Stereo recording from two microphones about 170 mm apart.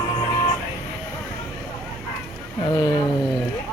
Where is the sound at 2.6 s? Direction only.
25° left (ahead or behind).